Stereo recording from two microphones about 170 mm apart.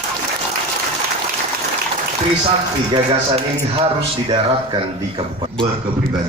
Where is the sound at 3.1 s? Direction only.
35° right (ahead or behind).